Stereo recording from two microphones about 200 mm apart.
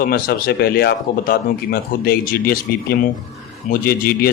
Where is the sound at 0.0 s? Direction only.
45° left (ahead or behind).